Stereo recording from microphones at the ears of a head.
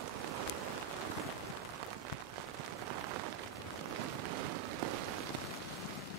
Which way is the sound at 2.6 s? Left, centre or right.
Right.